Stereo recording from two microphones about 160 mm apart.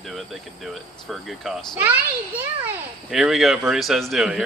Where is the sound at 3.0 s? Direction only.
Centre (ahead or behind).